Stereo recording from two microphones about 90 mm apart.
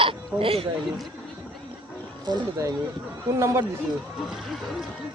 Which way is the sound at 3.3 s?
35° right (ahead or behind).